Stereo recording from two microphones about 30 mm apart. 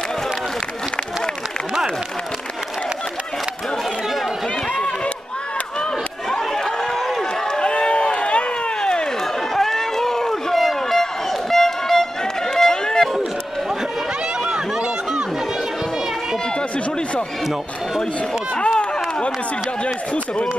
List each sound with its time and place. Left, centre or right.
6.3 s chatter: centre
7.0 s run: centre
7.5 s run: left
9.6 s run: centre
10.5 s a sound: centre
12.5 s run: centre
14.4 s run: right